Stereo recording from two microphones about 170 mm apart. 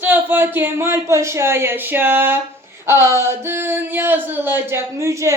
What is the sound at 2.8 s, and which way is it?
Speech, 15° right (ahead or behind).